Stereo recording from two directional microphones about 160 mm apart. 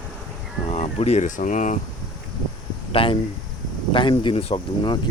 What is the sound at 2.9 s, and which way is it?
Speech, 35° left (ahead or behind).